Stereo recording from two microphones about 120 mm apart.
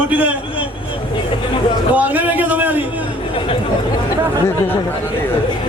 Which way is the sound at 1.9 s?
15° right (ahead or behind).